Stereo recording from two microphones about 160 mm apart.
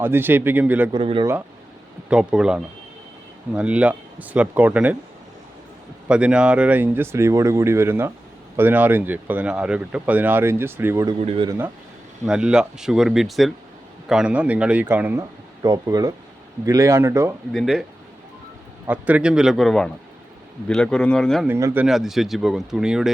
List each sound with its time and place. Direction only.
0.0 s speech: 15° right (ahead or behind)
0.9 s speech: 35° right (ahead or behind)
2.0 s speech: 5° right (ahead or behind)
6.1 s speech: 5° right (ahead or behind)
11.2 s speech: 40° right (ahead or behind)
11.4 s speech: 15° right (ahead or behind)
12.2 s speech: 5° right (ahead or behind)
15.6 s speech: 25° right (ahead or behind)
17.5 s speech: centre (ahead or behind)
18.9 s speech: 10° right (ahead or behind)
21.4 s speech: 15° right (ahead or behind)
21.8 s speech: centre (ahead or behind)